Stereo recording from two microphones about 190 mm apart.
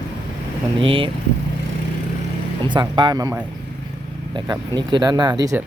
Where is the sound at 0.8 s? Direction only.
30° right (ahead or behind).